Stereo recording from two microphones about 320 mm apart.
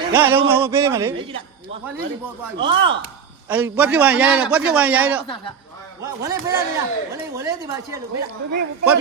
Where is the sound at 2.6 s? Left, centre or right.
Centre.